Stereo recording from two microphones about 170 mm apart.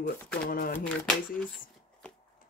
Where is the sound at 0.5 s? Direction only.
60° left (ahead or behind).